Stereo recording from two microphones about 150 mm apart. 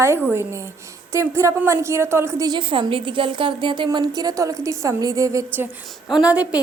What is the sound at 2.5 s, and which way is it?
A woman's voice, 35° right (ahead or behind).